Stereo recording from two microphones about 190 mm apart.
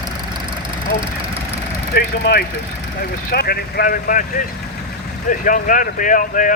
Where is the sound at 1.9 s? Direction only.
60° left (ahead or behind).